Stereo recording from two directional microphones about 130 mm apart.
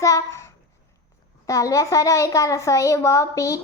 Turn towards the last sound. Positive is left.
turn(degrees=25)  # may be behind; listen again after turning